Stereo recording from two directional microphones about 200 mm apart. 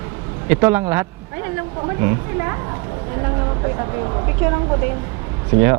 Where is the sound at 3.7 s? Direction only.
25° right (ahead or behind).